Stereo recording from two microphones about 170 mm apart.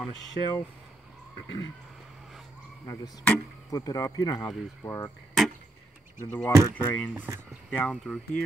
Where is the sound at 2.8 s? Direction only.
25° left (ahead or behind).